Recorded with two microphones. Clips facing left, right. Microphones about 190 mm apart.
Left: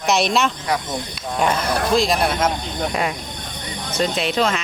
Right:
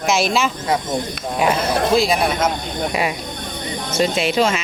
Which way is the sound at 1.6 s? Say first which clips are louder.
Right 3 dB; 25° right (ahead or behind).